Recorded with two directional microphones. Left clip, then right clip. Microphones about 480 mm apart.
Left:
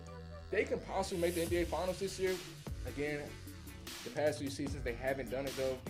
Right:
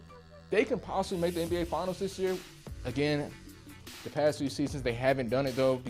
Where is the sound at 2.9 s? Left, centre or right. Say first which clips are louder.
Right 8 dB; right.